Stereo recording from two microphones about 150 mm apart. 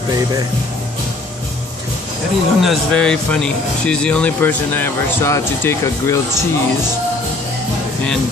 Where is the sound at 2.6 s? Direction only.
Centre (ahead or behind); by 6.2 s 20° left (ahead or behind).